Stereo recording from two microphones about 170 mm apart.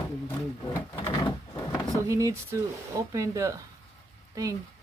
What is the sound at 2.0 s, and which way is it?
Speech, 20° right (ahead or behind).